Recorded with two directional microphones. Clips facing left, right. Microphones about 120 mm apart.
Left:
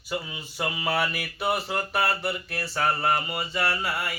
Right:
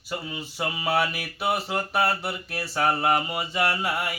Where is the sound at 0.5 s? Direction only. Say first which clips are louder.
Right 2 dB; 5° right (ahead or behind).